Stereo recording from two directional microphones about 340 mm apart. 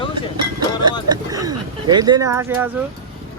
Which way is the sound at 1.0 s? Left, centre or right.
Centre.